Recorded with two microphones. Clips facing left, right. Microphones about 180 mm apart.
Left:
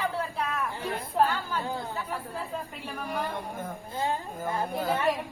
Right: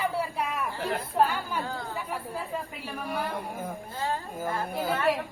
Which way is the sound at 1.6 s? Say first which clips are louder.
Left 2 dB; 15° left (ahead or behind).